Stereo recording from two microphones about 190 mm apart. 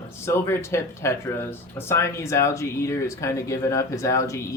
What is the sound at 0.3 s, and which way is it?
Speech, 15° left (ahead or behind).